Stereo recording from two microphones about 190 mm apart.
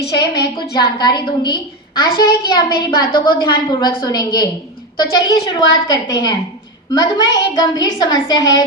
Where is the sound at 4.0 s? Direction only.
20° left (ahead or behind).